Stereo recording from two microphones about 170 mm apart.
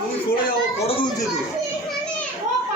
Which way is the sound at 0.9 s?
30° left (ahead or behind).